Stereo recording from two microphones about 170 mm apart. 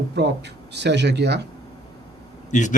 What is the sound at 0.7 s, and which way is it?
Speech, 90° right.